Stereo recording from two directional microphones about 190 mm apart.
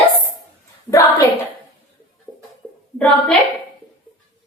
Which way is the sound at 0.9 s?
15° left (ahead or behind).